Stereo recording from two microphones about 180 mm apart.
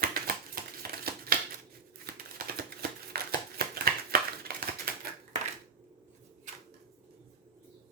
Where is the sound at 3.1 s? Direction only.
60° right (ahead or behind).